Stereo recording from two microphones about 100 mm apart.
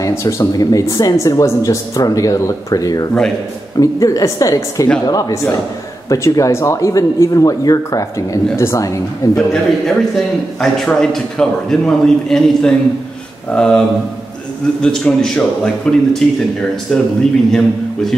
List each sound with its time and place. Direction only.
0.2 s speech: 30° left (ahead or behind)
10.6 s a man's voice: 5° left (ahead or behind)